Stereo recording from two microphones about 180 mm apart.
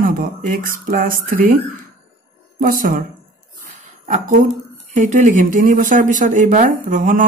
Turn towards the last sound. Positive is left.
turn(degrees=-45)  # may be behind; listen again after turning